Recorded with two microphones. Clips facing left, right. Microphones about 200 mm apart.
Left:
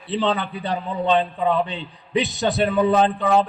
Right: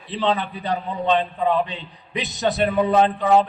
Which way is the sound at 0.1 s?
30° left (ahead or behind).